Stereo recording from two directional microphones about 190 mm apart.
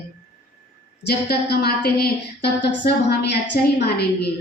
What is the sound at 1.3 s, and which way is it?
A woman's voice, 55° left (ahead or behind).